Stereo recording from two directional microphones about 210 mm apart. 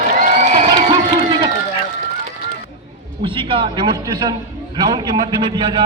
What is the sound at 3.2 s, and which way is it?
A man's voice, 25° right (ahead or behind).